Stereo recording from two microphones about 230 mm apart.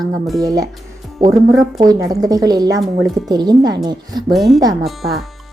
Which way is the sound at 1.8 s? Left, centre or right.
Centre.